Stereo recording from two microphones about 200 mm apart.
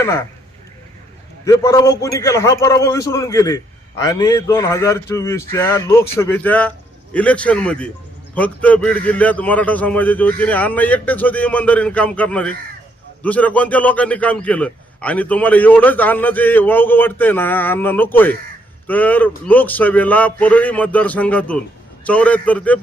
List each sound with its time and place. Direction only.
1.5 s a man's voice: 15° left (ahead or behind)